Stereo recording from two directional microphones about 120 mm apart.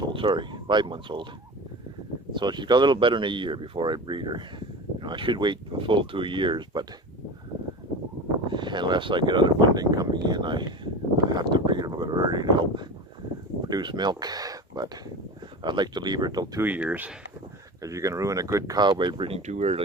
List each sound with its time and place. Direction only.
0.0 s speech: 45° right (ahead or behind)
2.3 s speech: 40° right (ahead or behind)
8.4 s speech: 40° right (ahead or behind)
16.6 s speech: 15° right (ahead or behind)
17.8 s speech: 25° right (ahead or behind); by 19.4 s 45° right (ahead or behind)
19.5 s speech: 70° right (ahead or behind)